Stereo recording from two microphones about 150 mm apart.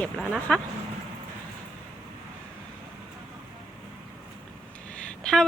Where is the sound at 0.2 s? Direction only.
5° right (ahead or behind).